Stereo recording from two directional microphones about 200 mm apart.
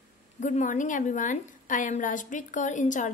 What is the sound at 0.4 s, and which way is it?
A woman's voice, 40° left (ahead or behind).